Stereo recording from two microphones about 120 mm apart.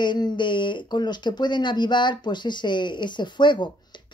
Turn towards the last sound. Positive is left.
turn(degrees=40)  # may be behind; listen again after turning